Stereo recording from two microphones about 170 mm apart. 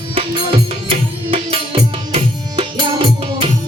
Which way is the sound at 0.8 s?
35° right (ahead or behind).